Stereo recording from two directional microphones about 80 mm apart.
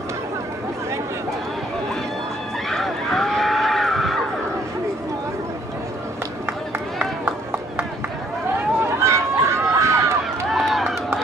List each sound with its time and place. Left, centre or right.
2.7 s vehicle: centre
7.0 s run: centre
9.0 s a sound: right
10.5 s run: centre